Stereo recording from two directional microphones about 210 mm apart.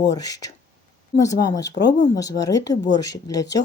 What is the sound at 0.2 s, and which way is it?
Speech, 15° left (ahead or behind).